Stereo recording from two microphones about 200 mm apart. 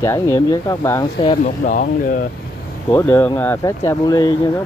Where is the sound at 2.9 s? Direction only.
10° left (ahead or behind).